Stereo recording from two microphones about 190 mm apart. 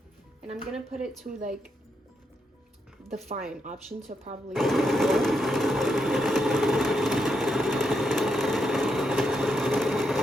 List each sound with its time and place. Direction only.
0.5 s speech: 5° right (ahead or behind)
3.3 s speech: 40° right (ahead or behind)
4.5 s sewing machine: centre (ahead or behind)